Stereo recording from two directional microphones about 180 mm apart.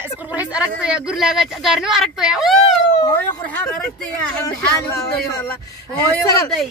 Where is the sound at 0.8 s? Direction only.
5° right (ahead or behind).